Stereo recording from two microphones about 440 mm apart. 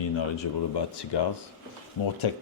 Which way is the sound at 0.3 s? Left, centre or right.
Left.